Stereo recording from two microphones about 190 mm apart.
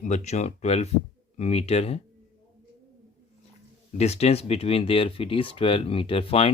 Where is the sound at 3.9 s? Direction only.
35° left (ahead or behind).